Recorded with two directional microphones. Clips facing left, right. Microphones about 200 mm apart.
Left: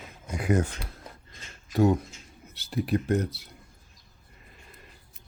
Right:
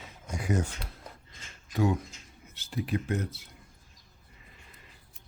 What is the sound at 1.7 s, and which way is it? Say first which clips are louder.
Speech: left 5 dB; 40° left (ahead or behind).